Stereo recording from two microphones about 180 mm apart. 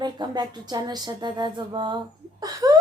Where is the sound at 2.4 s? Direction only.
20° right (ahead or behind).